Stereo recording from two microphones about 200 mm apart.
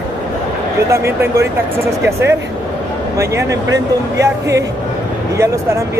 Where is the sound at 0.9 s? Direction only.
15° right (ahead or behind).